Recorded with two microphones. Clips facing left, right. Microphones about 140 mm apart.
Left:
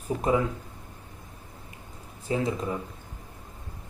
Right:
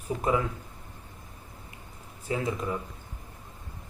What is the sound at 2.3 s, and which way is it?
Speech, 25° left (ahead or behind).